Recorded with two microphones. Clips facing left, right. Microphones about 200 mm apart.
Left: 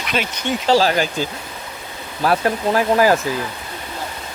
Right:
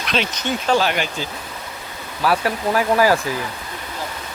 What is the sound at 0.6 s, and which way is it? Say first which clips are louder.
Speech: left 4 dB; 35° left (ahead or behind).